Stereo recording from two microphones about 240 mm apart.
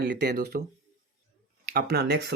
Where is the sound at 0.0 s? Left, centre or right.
Right.